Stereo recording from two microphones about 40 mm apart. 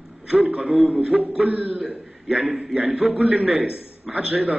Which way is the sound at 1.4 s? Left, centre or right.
Right.